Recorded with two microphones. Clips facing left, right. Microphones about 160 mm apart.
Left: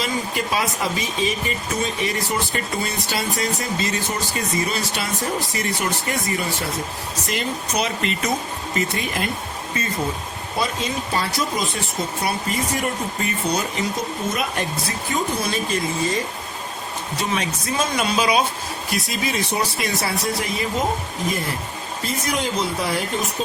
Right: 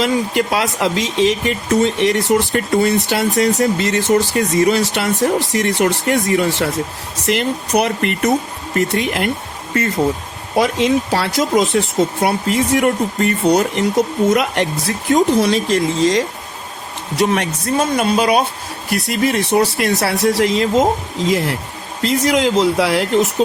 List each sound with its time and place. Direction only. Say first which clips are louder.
0.0 s speech: right 8 dB; 70° right (ahead or behind)
10.5 s speech: right 10 dB; 75° right (ahead or behind)
17.2 s speech: right 9 dB; 65° right (ahead or behind)